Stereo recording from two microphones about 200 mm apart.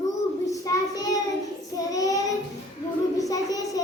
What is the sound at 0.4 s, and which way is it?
Child singing, 15° left (ahead or behind).